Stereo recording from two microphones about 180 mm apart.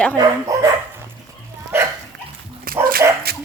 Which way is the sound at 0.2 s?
20° right (ahead or behind).